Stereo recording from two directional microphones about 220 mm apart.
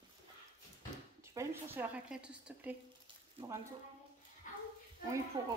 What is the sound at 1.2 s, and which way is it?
Speech, 15° right (ahead or behind).